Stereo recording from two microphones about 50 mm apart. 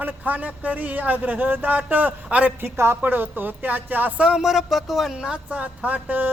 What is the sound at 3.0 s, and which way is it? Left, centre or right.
Speech, right.